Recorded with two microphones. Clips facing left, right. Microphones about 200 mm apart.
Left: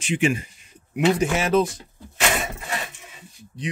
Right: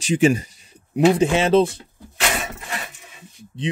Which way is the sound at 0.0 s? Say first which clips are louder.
Right 5 dB; 40° right (ahead or behind).